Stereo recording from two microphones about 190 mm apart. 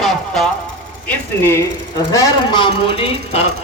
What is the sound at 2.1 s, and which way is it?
A man's voice, 20° left (ahead or behind).